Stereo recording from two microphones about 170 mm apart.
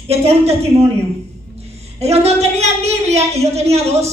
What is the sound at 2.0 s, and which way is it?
Speech, 40° right (ahead or behind).